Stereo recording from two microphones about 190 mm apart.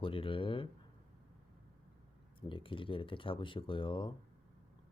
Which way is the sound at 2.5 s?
25° left (ahead or behind).